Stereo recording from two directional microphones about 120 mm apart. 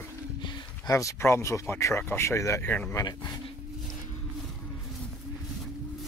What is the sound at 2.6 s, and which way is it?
Speech, 10° left (ahead or behind).